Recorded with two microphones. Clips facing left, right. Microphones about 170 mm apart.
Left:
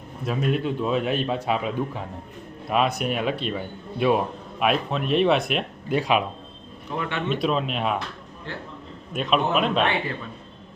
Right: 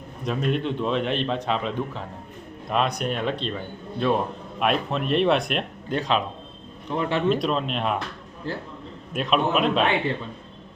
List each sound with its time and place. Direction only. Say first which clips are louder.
0.3 s a man's voice: even; 5° left (ahead or behind)
7.3 s a man's voice: right 1 dB; centre (ahead or behind)
8.5 s a man's voice: right 5 dB; 35° right (ahead or behind)
9.1 s a man's voice: even; centre (ahead or behind)